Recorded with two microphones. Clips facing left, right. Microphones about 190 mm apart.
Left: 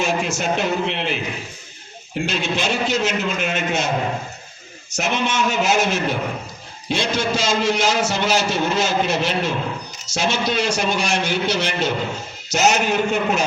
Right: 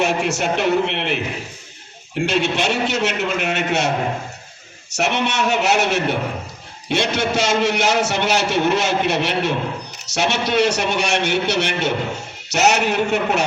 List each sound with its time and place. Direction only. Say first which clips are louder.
0.0 s a man's voice: right 2 dB; 70° right (ahead or behind)
2.2 s a man's voice: right 4 dB; 70° right (ahead or behind)
4.9 s a man's voice: right 1 dB; 70° right (ahead or behind)